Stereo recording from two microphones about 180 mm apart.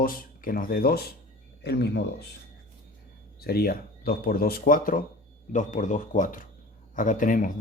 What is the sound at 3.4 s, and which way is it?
Speech, 60° left (ahead or behind).